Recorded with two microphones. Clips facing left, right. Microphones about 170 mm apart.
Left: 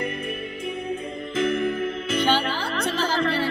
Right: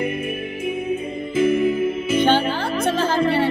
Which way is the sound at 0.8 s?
5° right (ahead or behind).